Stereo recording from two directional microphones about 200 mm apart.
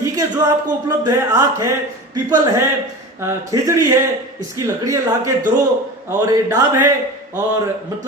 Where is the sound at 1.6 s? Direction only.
15° right (ahead or behind).